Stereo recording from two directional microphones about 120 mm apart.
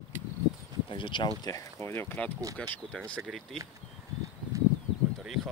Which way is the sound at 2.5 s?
5° left (ahead or behind).